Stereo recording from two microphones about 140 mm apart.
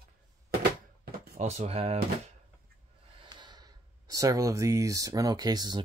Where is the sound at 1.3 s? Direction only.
50° right (ahead or behind).